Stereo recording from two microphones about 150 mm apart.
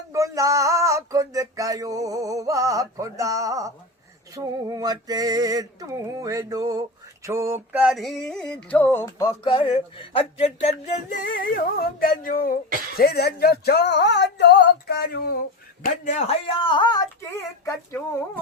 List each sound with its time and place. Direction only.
0.1 s a sound: 20° right (ahead or behind)
7.3 s music: 20° right (ahead or behind); by 9.3 s 20° left (ahead or behind)
9.4 s speech: 30° left (ahead or behind)
11.2 s music: 75° left (ahead or behind)
13.0 s speech: 85° left
15.8 s speech: 55° left (ahead or behind); by 17.7 s 20° left (ahead or behind)